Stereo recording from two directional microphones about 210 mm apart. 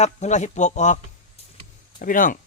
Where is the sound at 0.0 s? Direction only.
35° left (ahead or behind).